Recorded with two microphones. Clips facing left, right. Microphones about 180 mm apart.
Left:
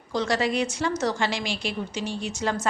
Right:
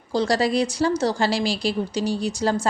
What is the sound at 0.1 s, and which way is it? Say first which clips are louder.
Speech: right 4 dB; 35° right (ahead or behind).